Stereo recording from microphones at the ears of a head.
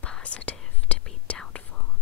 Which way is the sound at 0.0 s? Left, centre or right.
Left.